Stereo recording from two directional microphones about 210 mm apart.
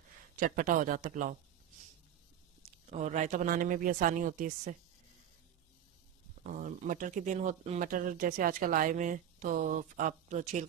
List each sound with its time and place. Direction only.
0.4 s speech: 40° right (ahead or behind)
2.9 s speech: 35° right (ahead or behind)
6.4 s speech: 40° right (ahead or behind)